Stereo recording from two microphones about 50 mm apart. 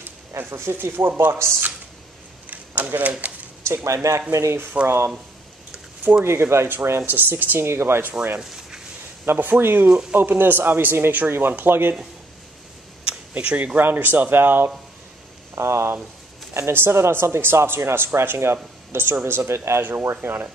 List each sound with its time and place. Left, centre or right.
0.5 s speech: right
2.5 s speech: right
3.6 s speech: right
4.8 s speech: right
6.1 s speech: right
6.5 s speech: right
7.1 s speech: right
8.4 s a sound: centre
9.2 s speech: right
13.0 s a sound: right
13.7 s speech: right
15.5 s speech: right
19.8 s speech: right